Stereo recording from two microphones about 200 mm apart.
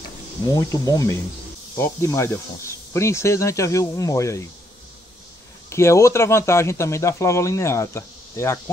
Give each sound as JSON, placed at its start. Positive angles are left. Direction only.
{"t": 0.5, "sound": "speech", "side_deg": 15}
{"t": 5.7, "sound": "speech", "side_deg": 15}